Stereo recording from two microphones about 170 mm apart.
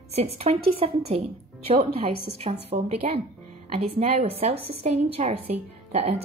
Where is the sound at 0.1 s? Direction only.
35° right (ahead or behind).